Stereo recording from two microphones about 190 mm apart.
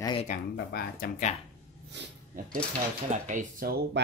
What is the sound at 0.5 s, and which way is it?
Speech, 55° left (ahead or behind).